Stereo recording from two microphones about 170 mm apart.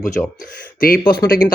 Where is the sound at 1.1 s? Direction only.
60° left (ahead or behind).